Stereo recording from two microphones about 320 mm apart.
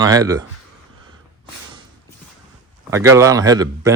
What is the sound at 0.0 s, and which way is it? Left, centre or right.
Speech, centre.